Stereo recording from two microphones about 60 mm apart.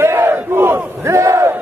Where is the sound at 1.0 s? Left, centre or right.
Right.